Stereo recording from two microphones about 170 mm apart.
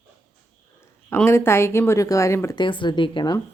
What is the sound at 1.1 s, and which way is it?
A woman's voice, 15° left (ahead or behind).